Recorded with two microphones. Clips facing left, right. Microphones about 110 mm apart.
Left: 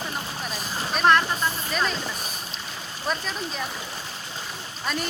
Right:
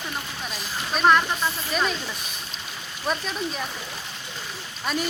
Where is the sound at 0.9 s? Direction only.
5° right (ahead or behind).